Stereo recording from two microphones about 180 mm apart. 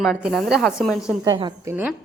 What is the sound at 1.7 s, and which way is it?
Speech, 10° right (ahead or behind).